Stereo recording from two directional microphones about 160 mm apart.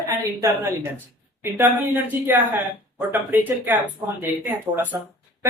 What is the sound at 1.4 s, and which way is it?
Speech, 15° right (ahead or behind).